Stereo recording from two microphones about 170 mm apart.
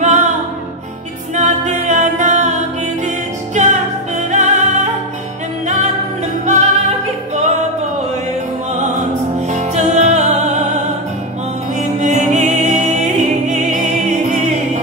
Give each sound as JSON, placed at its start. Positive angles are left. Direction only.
{"t": 0.0, "sound": "music", "side_deg": -45}
{"t": 3.5, "sound": "music", "side_deg": -45}
{"t": 6.4, "sound": "music", "side_deg": -40}
{"t": 9.5, "sound": "music", "side_deg": -45}
{"t": 12.0, "sound": "music", "side_deg": -45}